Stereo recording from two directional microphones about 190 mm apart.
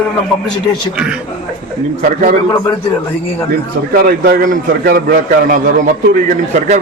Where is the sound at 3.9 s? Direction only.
55° right (ahead or behind).